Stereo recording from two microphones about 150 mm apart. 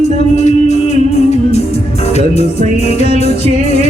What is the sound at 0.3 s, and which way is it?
Music, 50° left (ahead or behind).